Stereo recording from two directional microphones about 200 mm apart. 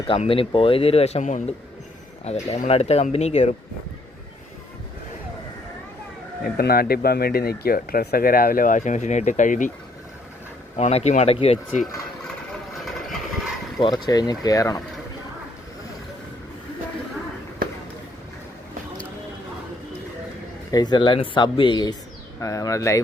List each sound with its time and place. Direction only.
0.1 s speech: 25° left (ahead or behind)
6.4 s speech: 50° left (ahead or behind)
10.8 s speech: 35° left (ahead or behind)
13.7 s speech: 20° left (ahead or behind)
20.7 s speech: 20° left (ahead or behind)